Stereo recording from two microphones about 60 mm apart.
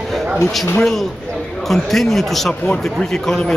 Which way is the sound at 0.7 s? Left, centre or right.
Centre.